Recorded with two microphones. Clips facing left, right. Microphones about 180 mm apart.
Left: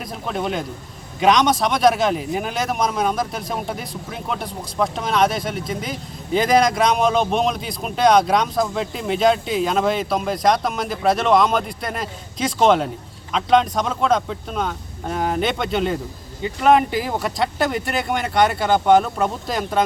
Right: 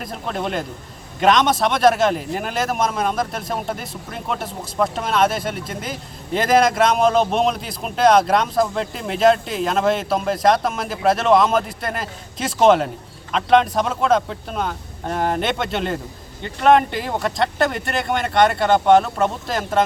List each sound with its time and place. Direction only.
0.0 s speech: centre (ahead or behind)